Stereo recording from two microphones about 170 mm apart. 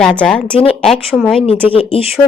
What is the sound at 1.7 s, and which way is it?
Speech, 30° left (ahead or behind).